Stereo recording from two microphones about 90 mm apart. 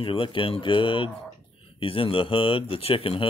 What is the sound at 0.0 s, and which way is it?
Speech, 75° left (ahead or behind).